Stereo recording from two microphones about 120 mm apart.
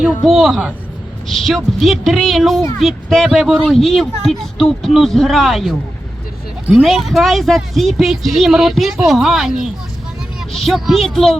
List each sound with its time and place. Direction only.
0.3 s speech: centre (ahead or behind)